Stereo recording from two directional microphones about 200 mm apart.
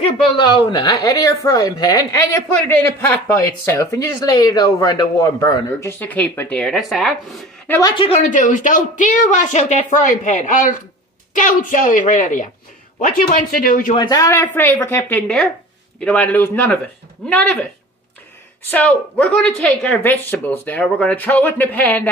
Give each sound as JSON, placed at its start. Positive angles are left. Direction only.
{"t": 0.4, "sound": "a woman's voice", "side_deg": 20}
{"t": 7.9, "sound": "speech", "side_deg": 30}
{"t": 13.9, "sound": "a woman's voice", "side_deg": 20}
{"t": 18.7, "sound": "a woman's voice", "side_deg": 5}